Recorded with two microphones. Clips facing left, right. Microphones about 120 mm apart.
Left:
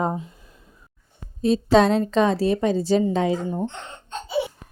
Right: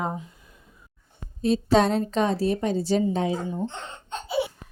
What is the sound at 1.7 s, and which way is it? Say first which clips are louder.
A woman's voice: left 4 dB; 90° left.